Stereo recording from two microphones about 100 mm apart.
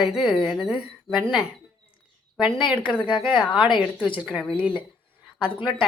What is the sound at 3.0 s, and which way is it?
Speech, 60° left (ahead or behind).